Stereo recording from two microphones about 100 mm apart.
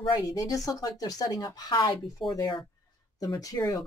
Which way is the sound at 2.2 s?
60° left (ahead or behind).